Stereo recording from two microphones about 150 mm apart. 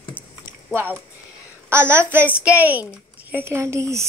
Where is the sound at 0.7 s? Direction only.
15° right (ahead or behind).